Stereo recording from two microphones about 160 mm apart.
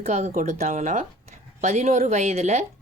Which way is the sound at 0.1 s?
50° right (ahead or behind).